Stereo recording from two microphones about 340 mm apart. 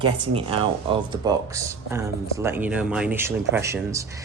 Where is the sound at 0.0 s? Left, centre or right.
Centre.